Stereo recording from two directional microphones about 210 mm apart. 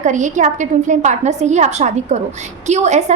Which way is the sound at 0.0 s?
35° right (ahead or behind).